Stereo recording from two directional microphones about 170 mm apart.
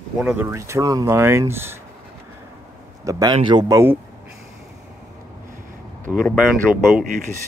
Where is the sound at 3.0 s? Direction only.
20° right (ahead or behind).